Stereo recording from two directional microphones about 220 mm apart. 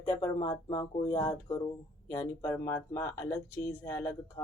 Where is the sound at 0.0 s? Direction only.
15° left (ahead or behind).